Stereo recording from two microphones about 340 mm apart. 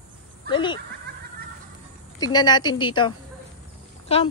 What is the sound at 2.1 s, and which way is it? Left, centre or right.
A woman's voice, centre.